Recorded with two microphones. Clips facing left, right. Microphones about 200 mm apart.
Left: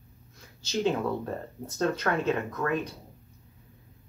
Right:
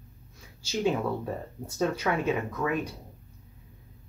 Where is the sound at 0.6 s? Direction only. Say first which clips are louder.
Even; 10° right (ahead or behind).